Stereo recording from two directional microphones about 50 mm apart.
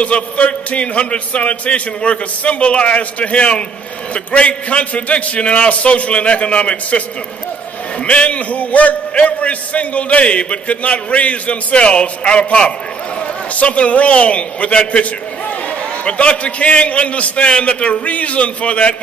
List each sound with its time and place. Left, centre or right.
0.0 s a man's voice: left
8.0 s a man's voice: left